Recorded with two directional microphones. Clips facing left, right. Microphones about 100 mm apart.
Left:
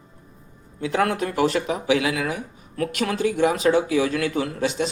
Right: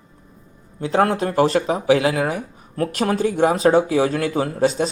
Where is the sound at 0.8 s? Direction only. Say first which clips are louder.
Right 4 dB; 35° right (ahead or behind).